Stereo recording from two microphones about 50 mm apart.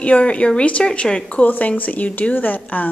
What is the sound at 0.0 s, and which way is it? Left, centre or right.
Speech, left.